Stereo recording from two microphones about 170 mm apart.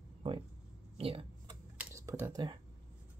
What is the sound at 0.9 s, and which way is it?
Speech, 35° right (ahead or behind).